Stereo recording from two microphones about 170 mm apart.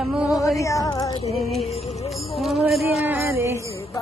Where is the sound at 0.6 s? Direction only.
20° left (ahead or behind).